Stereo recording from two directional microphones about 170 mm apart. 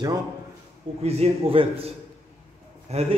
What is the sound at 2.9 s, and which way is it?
Speech, 40° right (ahead or behind).